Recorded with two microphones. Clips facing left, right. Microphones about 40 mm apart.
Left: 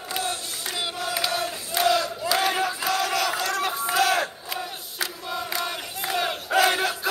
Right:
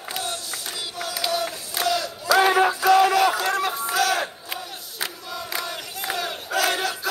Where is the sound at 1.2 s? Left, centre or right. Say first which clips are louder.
Right 4 dB; left.